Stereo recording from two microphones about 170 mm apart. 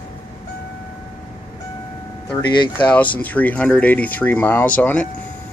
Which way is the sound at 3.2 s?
10° left (ahead or behind).